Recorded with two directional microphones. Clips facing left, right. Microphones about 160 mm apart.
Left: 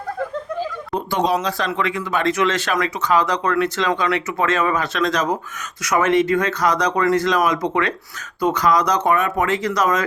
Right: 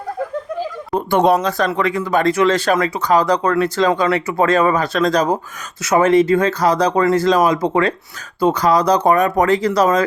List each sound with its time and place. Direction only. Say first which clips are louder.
0.9 s speech: right 6 dB; 55° right (ahead or behind); by 10.0 s 35° right (ahead or behind)